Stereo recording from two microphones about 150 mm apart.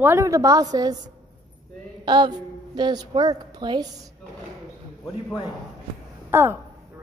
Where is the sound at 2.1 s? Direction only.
30° right (ahead or behind).